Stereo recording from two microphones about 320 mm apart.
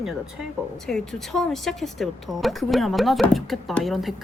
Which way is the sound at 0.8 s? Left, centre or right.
Centre.